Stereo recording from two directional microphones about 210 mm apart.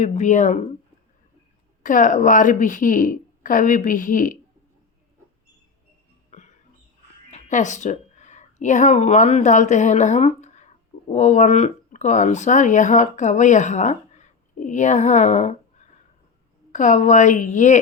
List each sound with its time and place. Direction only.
0.0 s a woman's voice: 35° left (ahead or behind)
1.8 s a woman's voice: 40° left (ahead or behind)
6.3 s music: 35° left (ahead or behind)
7.3 s a woman's voice: 35° left (ahead or behind)